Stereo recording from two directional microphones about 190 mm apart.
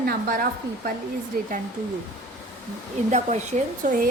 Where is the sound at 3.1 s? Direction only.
35° right (ahead or behind).